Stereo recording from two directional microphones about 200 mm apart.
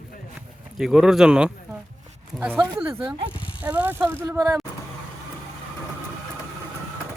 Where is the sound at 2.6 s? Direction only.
20° right (ahead or behind).